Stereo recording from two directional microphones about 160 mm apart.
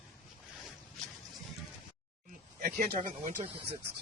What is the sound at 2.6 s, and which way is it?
Speech, 70° right (ahead or behind).